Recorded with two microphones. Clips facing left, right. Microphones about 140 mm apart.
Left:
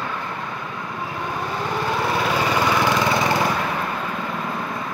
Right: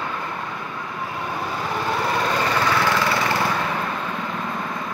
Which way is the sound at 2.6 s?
15° left (ahead or behind).